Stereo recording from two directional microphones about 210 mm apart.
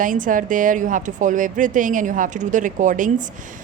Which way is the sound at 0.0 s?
40° right (ahead or behind).